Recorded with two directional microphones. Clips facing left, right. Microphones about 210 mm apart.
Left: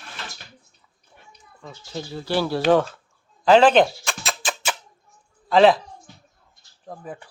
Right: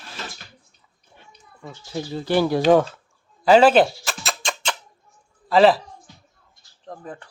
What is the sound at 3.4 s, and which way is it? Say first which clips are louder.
Music: right 1 dB; 5° right (ahead or behind).